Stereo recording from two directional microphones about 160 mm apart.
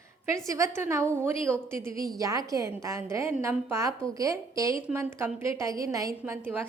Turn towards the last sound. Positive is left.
turn(degrees=-15)  # may be behind; listen again after turning